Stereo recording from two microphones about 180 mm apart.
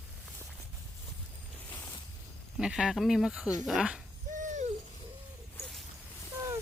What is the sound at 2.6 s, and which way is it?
Speech, 5° right (ahead or behind).